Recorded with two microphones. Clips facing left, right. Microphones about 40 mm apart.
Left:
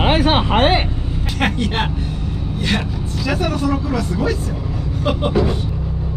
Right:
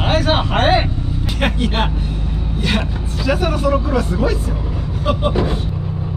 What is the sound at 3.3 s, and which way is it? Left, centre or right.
Vehicle, centre.